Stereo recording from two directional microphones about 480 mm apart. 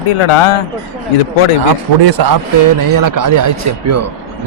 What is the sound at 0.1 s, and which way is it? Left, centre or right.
Speech, left.